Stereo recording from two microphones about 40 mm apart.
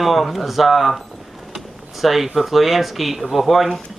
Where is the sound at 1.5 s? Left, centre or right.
Centre.